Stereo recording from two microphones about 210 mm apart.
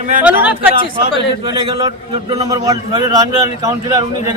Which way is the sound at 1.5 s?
20° right (ahead or behind).